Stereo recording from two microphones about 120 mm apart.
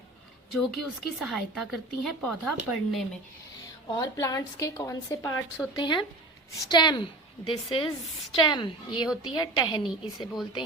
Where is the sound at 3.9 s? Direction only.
30° left (ahead or behind).